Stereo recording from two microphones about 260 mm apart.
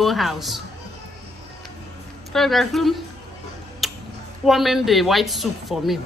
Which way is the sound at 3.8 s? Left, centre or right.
Centre.